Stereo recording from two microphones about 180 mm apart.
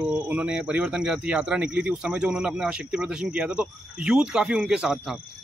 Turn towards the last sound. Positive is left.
turn(degrees=0)  # may be behind; listen again after turning